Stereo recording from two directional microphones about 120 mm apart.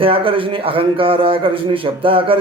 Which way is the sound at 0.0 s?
50° right (ahead or behind).